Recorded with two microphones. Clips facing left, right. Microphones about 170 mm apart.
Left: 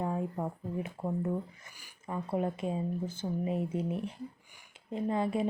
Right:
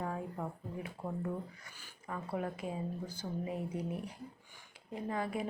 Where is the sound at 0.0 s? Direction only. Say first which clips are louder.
Left 5 dB; 25° left (ahead or behind).